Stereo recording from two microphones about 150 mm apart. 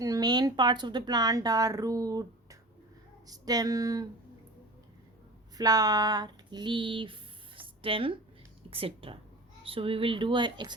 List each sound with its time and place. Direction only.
0.0 s speech: 25° right (ahead or behind)
5.5 s a sound: 25° right (ahead or behind)
8.7 s a woman's voice: 40° right (ahead or behind)